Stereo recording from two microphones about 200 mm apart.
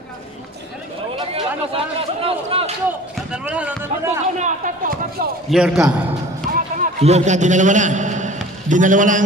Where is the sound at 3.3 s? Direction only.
5° right (ahead or behind).